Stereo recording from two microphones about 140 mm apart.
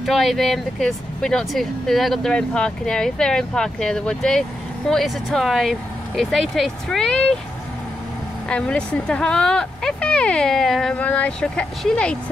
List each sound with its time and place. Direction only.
0.0 s speech: centre (ahead or behind)
8.5 s speech: 5° left (ahead or behind)